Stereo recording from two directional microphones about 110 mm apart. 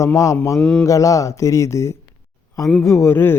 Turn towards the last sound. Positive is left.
turn(degrees=20)  # may be behind; listen again after turning